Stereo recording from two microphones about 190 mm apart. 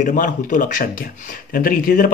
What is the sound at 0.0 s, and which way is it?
Speech, 45° left (ahead or behind).